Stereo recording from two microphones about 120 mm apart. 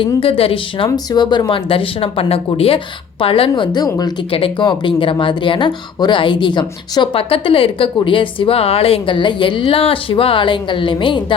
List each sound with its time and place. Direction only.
0.0 s a woman's voice: 50° left (ahead or behind)
0.9 s a woman's voice: 35° left (ahead or behind)
4.3 s a woman's voice: 50° left (ahead or behind)